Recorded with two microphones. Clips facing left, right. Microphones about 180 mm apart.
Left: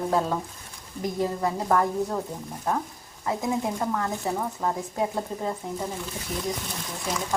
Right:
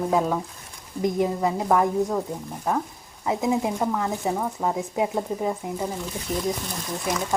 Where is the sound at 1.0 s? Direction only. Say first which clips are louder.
Right 4 dB; 20° right (ahead or behind).